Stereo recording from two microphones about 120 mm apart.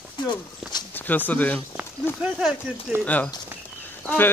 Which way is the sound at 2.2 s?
5° right (ahead or behind).